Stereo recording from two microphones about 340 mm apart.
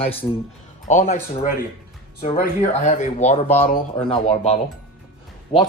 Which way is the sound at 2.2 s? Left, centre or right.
Centre.